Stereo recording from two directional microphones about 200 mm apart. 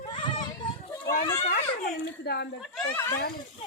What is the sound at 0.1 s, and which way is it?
Children playing, 25° left (ahead or behind).